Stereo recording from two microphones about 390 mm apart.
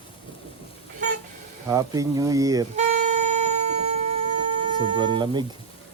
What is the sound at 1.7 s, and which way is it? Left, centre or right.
Wind instrument, centre.